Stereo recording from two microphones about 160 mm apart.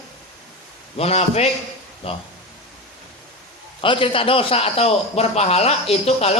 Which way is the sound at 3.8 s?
35° left (ahead or behind).